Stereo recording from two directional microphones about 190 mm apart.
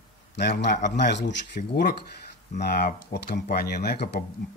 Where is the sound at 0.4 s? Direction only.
60° left (ahead or behind).